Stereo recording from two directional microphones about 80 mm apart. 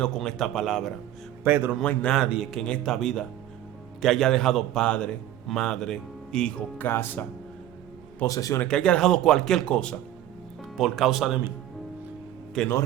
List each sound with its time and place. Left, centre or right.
0.0 s a man's voice: centre
1.5 s a man's voice: right
1.8 s speech: centre
2.2 s speech: centre
2.5 s a man's voice: centre
6.7 s speech: left
8.3 s speech: left
8.6 s speech: centre
10.6 s speech: centre
12.6 s speech: centre